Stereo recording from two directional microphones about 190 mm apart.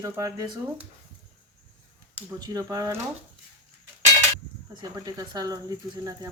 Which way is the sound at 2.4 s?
20° right (ahead or behind).